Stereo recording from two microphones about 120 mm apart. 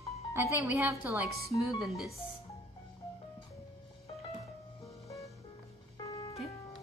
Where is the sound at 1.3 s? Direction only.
25° left (ahead or behind).